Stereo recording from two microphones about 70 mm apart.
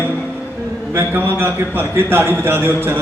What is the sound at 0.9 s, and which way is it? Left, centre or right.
A man's voice, right.